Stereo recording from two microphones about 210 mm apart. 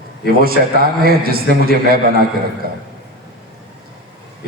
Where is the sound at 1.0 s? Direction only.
45° right (ahead or behind).